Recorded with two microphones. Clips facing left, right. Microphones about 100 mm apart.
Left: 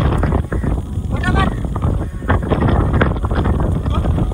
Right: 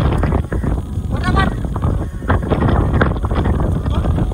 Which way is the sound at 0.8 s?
20° right (ahead or behind).